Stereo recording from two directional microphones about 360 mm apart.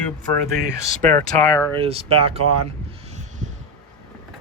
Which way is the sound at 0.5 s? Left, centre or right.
Centre.